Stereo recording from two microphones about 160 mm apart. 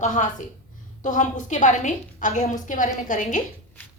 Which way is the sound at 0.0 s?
50° left (ahead or behind).